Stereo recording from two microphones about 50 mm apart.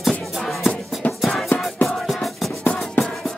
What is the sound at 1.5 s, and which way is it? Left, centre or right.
Music, left.